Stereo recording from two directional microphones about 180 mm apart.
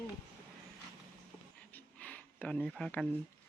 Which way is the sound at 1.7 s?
10° left (ahead or behind).